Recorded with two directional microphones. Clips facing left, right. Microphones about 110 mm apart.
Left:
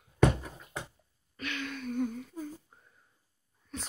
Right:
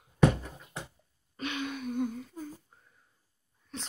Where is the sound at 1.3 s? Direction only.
20° right (ahead or behind); by 2.4 s 5° right (ahead or behind).